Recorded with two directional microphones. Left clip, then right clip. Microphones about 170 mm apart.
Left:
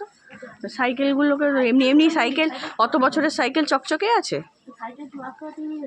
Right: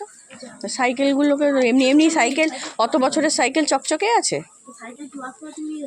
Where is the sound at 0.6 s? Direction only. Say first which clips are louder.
Right 2 dB; 20° right (ahead or behind).